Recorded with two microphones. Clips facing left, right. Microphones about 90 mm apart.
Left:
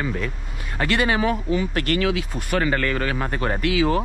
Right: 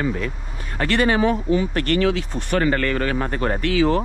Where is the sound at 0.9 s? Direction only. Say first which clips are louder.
Right 3 dB; 45° right (ahead or behind).